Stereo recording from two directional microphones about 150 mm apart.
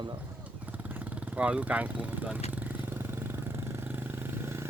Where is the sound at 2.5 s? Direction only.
10° right (ahead or behind).